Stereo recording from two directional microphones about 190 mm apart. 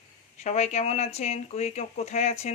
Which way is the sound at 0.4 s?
35° left (ahead or behind).